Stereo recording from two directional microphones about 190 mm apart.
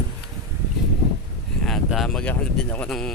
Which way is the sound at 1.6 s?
Centre (ahead or behind).